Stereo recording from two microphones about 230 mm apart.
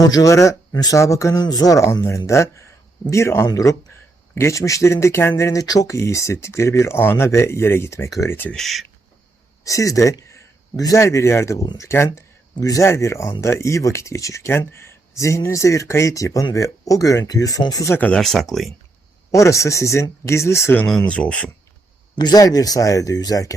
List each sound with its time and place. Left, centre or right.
0.0 s a man's voice: centre
9.6 s a man's voice: centre
19.3 s a man's voice: centre
22.2 s a man's voice: centre